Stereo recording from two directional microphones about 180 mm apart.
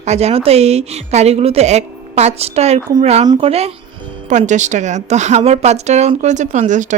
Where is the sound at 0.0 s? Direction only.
35° right (ahead or behind).